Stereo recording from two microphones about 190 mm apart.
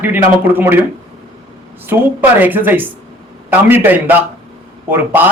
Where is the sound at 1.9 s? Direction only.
15° right (ahead or behind).